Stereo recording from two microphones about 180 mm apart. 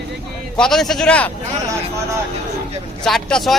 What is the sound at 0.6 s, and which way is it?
Speech, centre (ahead or behind).